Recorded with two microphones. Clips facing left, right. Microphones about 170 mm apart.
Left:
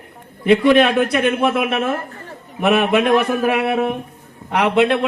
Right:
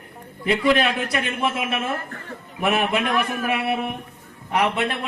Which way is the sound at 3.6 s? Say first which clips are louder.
Left 6 dB; 90° left.